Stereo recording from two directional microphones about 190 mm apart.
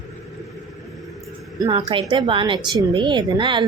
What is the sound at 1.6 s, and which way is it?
Speech, 20° right (ahead or behind).